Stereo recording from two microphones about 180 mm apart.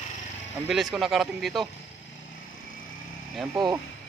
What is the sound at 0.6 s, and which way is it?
A man's voice, centre (ahead or behind).